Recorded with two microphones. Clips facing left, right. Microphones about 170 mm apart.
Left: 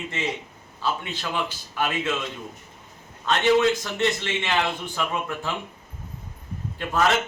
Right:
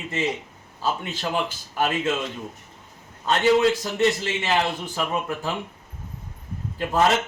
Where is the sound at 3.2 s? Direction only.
35° right (ahead or behind).